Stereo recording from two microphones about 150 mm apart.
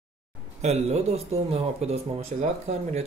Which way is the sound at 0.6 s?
45° right (ahead or behind).